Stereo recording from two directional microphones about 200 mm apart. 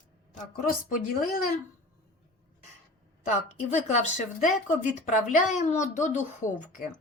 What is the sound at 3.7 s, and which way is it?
A woman's voice, 35° left (ahead or behind).